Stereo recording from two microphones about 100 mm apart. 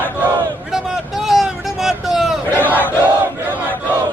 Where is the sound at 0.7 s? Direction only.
5° right (ahead or behind).